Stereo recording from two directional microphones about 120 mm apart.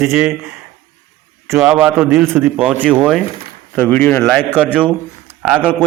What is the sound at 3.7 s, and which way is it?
Speech, 15° left (ahead or behind).